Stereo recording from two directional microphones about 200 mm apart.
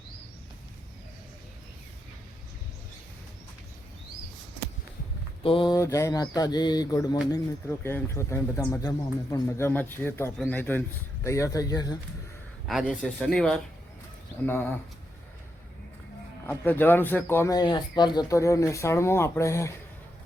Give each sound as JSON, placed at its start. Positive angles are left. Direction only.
{"t": 5.4, "sound": "speech", "side_deg": 25}
{"t": 12.6, "sound": "speech", "side_deg": 0}
{"t": 16.5, "sound": "speech", "side_deg": 10}